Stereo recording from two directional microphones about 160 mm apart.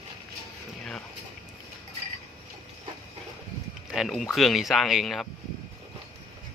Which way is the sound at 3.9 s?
Centre (ahead or behind).